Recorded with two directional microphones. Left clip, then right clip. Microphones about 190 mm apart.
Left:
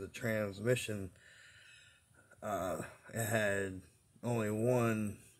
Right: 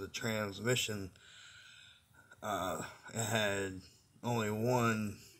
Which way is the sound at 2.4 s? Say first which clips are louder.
Right 1 dB; 35° left (ahead or behind).